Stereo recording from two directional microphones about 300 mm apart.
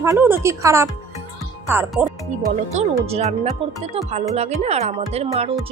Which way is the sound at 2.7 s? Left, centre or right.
Right.